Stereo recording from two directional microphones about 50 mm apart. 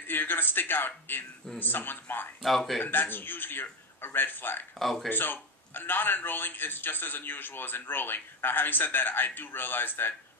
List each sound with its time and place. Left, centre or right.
0.0 s a man's voice: left
2.4 s speech: centre
2.8 s a man's voice: left
4.7 s speech: centre
5.1 s a man's voice: left